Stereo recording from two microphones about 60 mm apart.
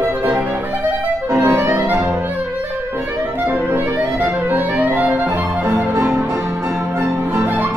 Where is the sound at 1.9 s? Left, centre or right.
Right.